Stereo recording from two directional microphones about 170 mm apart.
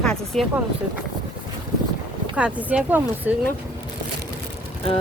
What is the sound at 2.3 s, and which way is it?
Speech, 10° right (ahead or behind).